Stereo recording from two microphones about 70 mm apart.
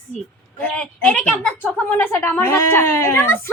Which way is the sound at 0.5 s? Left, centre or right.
Centre.